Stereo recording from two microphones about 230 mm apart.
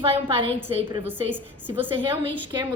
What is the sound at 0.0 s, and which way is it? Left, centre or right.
Speech, right.